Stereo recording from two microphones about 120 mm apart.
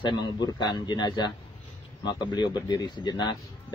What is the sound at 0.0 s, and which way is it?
Speech, 35° left (ahead or behind).